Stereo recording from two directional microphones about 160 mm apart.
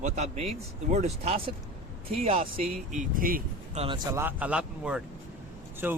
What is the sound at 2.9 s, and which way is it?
Speech, 55° right (ahead or behind).